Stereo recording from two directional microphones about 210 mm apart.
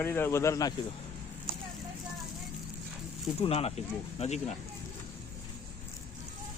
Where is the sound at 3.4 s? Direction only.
30° left (ahead or behind).